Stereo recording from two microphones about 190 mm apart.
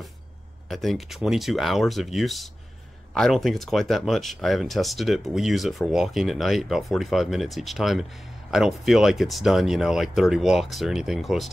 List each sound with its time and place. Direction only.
0.7 s speech: centre (ahead or behind)